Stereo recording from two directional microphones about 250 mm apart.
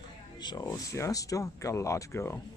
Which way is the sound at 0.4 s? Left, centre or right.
Centre.